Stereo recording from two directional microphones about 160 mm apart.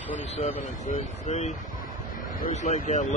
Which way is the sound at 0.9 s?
45° left (ahead or behind).